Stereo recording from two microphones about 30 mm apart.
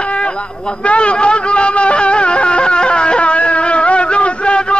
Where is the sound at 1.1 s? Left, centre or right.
Left.